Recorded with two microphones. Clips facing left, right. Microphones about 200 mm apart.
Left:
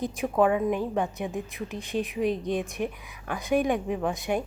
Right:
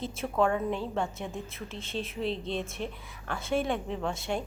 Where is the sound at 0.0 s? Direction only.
15° left (ahead or behind).